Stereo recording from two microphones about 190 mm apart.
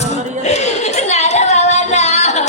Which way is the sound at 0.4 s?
35° left (ahead or behind).